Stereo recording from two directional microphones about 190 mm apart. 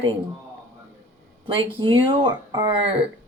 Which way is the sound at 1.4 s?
25° right (ahead or behind).